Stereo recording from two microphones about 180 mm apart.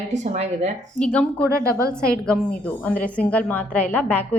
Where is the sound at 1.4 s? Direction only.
15° right (ahead or behind).